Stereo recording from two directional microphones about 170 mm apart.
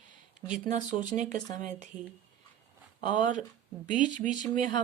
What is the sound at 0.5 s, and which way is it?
Speech, 45° right (ahead or behind).